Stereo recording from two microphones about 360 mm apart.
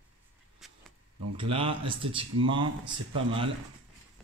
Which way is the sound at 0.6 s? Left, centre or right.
Centre.